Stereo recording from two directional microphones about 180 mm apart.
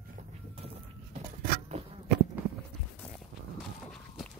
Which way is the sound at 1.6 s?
35° right (ahead or behind).